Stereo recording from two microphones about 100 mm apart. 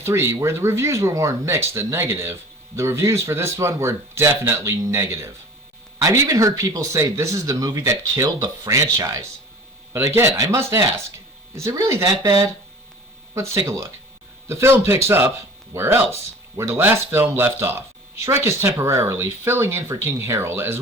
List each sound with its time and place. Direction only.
0.0 s speech: 25° right (ahead or behind)
13.3 s speech: 30° right (ahead or behind)